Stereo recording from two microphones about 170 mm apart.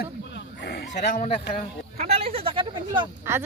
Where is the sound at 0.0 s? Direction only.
80° left.